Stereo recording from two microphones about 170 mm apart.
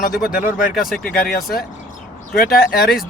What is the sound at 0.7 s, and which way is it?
Speech, centre (ahead or behind).